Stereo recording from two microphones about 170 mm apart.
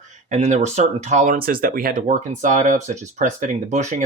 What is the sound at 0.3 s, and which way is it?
Speech, 45° right (ahead or behind).